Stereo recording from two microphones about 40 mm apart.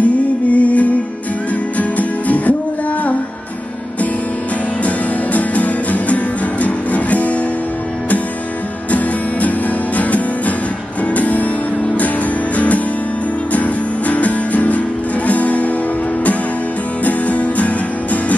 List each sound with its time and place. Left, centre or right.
0.0 s music: left
4.8 s music: left
9.9 s music: left
17.0 s music: left